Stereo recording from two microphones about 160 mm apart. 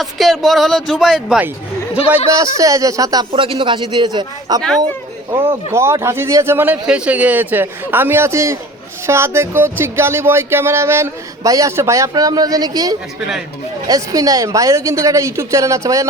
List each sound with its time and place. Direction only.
0.0 s speech: centre (ahead or behind)
2.3 s speech: 20° right (ahead or behind)
5.7 s speech: 15° right (ahead or behind)